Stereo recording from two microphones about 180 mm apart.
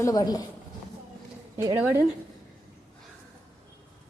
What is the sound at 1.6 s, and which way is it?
Speech, 15° right (ahead or behind).